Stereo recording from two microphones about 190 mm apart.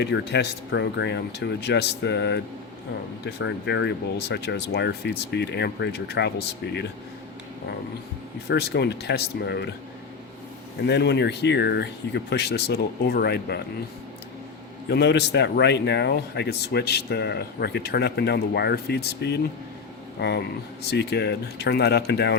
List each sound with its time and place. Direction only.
0.0 s a man's voice: 65° left (ahead or behind)
8.4 s a man's voice: 60° left (ahead or behind)
10.8 s a man's voice: 65° left (ahead or behind)
14.8 s a man's voice: 60° left (ahead or behind)
20.9 s a man's voice: 60° left (ahead or behind)